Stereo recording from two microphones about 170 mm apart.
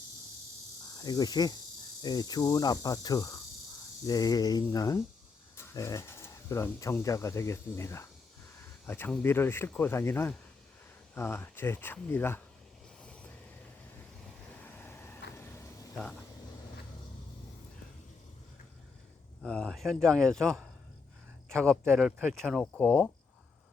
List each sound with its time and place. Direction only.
0.9 s cricket: 25° left (ahead or behind)
5.5 s speech: 15° left (ahead or behind)
13.0 s vehicle: 5° left (ahead or behind)
14.6 s vehicle: 10° left (ahead or behind)
15.4 s a sound: 15° left (ahead or behind)
16.0 s speech: 5° left (ahead or behind)
19.4 s speech: 5° left (ahead or behind)